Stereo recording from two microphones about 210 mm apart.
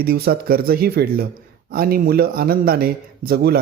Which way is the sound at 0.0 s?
45° right (ahead or behind).